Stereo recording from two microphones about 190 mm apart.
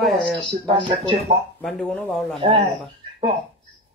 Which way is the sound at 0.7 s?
25° right (ahead or behind).